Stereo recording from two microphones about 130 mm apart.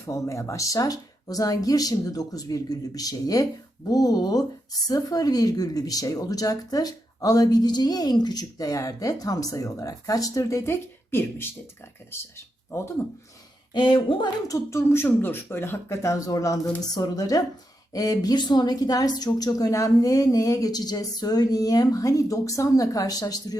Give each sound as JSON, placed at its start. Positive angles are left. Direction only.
{"t": 0.0, "sound": "a woman's voice", "side_deg": 25}
{"t": 13.7, "sound": "speech", "side_deg": 40}
{"t": 14.4, "sound": "a woman's voice", "side_deg": 25}